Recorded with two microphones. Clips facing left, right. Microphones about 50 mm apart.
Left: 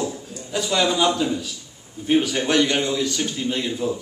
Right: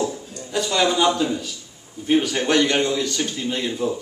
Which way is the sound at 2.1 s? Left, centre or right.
Centre.